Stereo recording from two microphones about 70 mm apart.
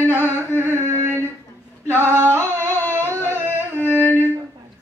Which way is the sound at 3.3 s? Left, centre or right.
Right.